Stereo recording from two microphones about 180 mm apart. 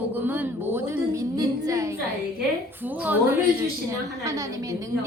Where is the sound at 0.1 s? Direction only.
10° right (ahead or behind).